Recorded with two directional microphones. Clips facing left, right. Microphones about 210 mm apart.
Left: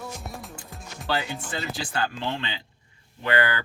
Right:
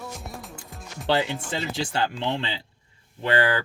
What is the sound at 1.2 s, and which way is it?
Speech, centre (ahead or behind).